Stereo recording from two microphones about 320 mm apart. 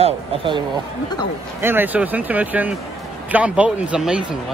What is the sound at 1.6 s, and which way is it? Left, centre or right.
Speech, centre.